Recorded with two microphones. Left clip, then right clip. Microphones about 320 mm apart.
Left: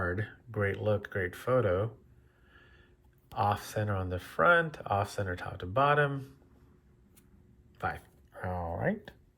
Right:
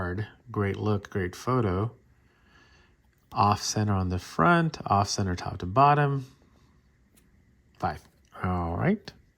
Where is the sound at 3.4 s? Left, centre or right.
Centre.